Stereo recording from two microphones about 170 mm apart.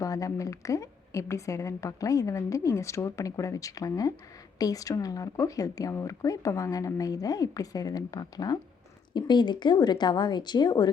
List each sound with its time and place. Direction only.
0.0 s a woman's voice: 20° left (ahead or behind)